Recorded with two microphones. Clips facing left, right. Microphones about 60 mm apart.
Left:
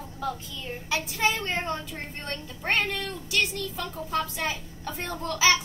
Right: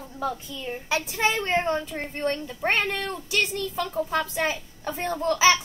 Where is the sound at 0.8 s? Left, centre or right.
Right.